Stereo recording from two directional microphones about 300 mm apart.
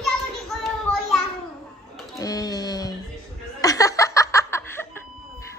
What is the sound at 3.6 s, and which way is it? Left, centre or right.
Snicker, centre.